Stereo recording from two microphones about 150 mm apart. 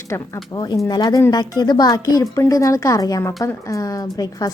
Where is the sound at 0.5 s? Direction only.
30° left (ahead or behind).